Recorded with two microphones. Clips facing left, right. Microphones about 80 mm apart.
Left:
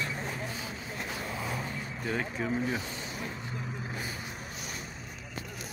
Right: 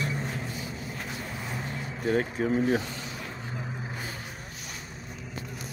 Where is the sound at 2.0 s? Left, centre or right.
Right.